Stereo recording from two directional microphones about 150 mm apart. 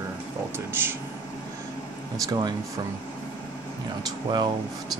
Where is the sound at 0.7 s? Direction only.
15° right (ahead or behind).